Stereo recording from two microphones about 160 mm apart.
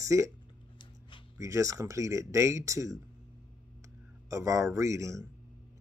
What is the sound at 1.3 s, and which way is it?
Speech, 20° right (ahead or behind).